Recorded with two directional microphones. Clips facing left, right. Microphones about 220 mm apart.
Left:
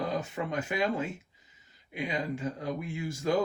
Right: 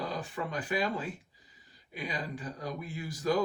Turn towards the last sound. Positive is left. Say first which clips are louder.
# left 2 dB
turn(degrees=25)  # may be behind; listen again after turning